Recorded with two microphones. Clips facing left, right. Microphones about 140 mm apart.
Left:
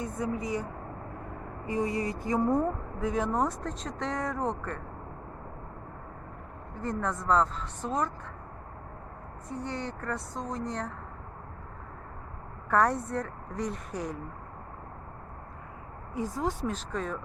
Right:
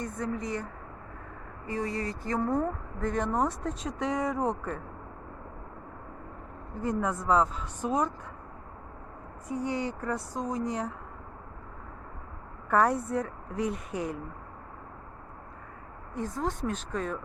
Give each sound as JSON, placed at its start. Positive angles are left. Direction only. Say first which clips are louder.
{"t": 0.0, "sound": "speech", "louder": "left 1 dB", "side_deg": 5}
{"t": 1.6, "sound": "speech", "louder": "left 2 dB", "side_deg": 20}
{"t": 2.4, "sound": "speech", "louder": "left 2 dB", "side_deg": 0}
{"t": 6.8, "sound": "speech", "louder": "right 1 dB", "side_deg": -5}
{"t": 9.5, "sound": "speech", "louder": "right 4 dB", "side_deg": -5}
{"t": 12.7, "sound": "speech", "louder": "right 1 dB", "side_deg": 0}
{"t": 16.4, "sound": "speech", "louder": "right 1 dB", "side_deg": 0}